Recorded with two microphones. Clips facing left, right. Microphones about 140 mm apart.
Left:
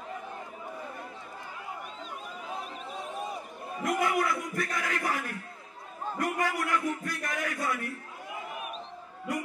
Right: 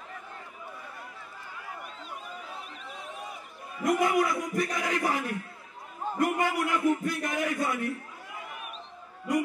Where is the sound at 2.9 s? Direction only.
35° left (ahead or behind).